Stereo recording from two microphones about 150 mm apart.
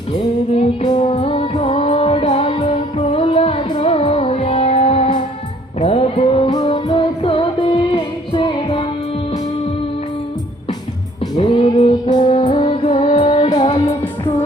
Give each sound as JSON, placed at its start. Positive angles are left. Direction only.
{"t": 0.5, "sound": "music", "side_deg": 45}
{"t": 11.3, "sound": "music", "side_deg": 40}